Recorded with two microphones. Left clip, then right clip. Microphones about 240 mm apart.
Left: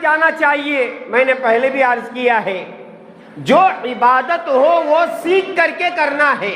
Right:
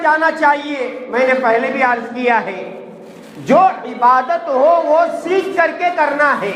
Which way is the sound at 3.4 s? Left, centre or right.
Left.